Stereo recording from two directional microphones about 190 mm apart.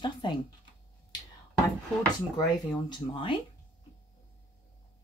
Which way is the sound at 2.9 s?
25° left (ahead or behind).